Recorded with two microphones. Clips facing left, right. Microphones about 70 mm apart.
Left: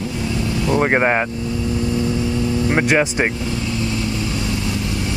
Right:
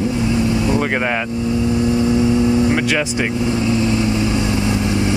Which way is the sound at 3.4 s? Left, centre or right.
Right.